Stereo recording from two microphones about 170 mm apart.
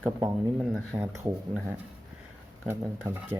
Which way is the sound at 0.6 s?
5° right (ahead or behind).